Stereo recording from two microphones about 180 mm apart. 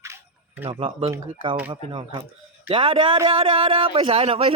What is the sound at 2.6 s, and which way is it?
Speech, 30° right (ahead or behind).